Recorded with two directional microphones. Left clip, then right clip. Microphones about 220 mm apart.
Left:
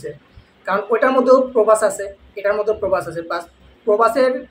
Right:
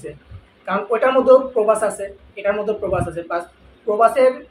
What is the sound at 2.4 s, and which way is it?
A woman's voice, 20° left (ahead or behind).